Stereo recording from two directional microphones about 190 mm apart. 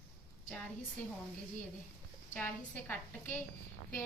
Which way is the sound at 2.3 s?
10° left (ahead or behind).